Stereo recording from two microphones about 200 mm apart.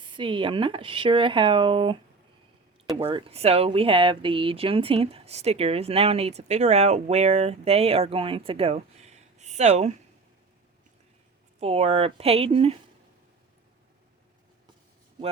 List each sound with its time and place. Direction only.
0.0 s speech: 25° right (ahead or behind)
11.6 s speech: 30° right (ahead or behind)